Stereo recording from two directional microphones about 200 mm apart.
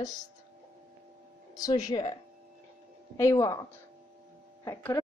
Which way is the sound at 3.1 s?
15° left (ahead or behind).